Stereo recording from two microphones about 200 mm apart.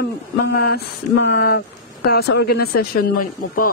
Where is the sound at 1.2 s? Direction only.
50° left (ahead or behind).